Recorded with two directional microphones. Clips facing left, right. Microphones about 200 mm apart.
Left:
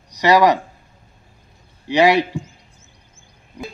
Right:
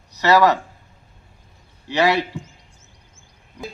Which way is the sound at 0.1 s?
15° left (ahead or behind).